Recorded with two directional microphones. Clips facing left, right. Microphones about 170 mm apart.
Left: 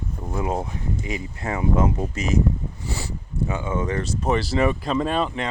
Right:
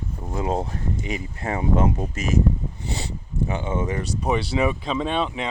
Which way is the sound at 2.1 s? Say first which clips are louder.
Left 1 dB; 50° right (ahead or behind).